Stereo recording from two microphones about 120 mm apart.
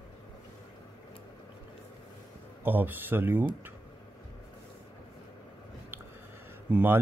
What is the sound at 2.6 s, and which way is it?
Speech, 15° right (ahead or behind).